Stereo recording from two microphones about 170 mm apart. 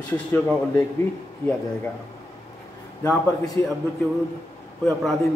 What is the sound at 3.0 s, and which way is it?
Speech, 20° left (ahead or behind).